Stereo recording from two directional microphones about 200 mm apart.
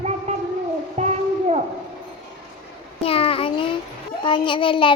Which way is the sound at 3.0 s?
30° left (ahead or behind).